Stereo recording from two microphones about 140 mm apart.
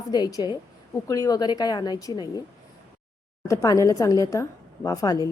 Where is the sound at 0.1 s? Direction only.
25° left (ahead or behind).